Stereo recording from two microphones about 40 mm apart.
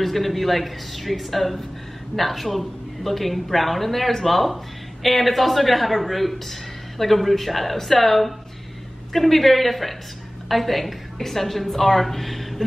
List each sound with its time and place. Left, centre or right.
0.0 s a woman's voice: centre